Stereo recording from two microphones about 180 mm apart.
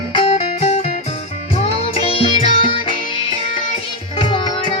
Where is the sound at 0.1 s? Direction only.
30° left (ahead or behind).